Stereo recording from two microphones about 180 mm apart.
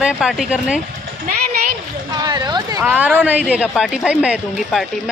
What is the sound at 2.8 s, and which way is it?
A woman's voice, 10° right (ahead or behind).